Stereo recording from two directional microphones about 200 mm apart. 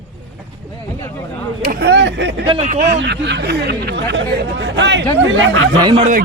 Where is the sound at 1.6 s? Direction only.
55° right (ahead or behind).